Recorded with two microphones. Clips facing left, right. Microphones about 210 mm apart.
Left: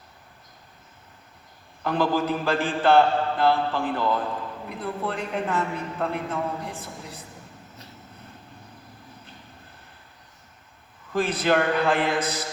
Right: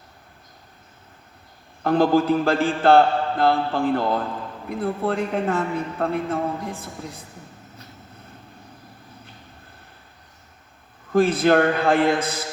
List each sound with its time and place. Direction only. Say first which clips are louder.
1.8 s mantra: right 6 dB; 45° right (ahead or behind)
11.1 s mantra: right 6 dB; 45° right (ahead or behind)